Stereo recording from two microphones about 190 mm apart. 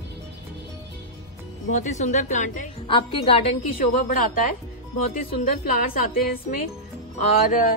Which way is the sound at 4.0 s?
45° left (ahead or behind).